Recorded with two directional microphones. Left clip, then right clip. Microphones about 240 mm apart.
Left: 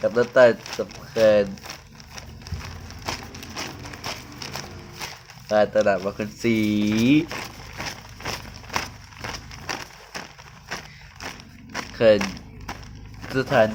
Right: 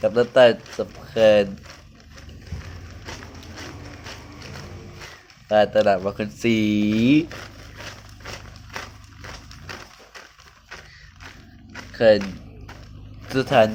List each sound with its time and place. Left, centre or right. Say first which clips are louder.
0.0 s speech: right 1 dB; centre
5.5 s speech: right 2 dB; centre
9.2 s a sound: left 6 dB; left
11.9 s speech: right 1 dB; centre
13.3 s speech: right 2 dB; centre